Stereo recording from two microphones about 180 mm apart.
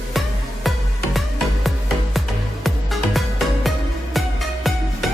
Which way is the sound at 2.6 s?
Centre (ahead or behind).